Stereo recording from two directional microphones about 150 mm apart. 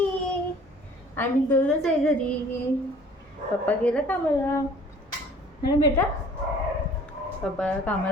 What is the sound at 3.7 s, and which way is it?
Speech, 10° left (ahead or behind).